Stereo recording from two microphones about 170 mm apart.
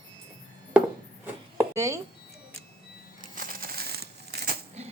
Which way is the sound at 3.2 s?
55° right (ahead or behind).